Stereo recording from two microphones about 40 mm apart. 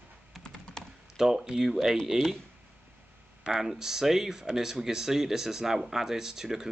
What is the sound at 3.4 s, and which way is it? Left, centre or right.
Speech, centre.